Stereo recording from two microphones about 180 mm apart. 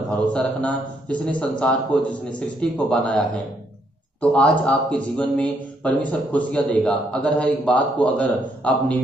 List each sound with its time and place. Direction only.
0.3 s a man's voice: 5° left (ahead or behind)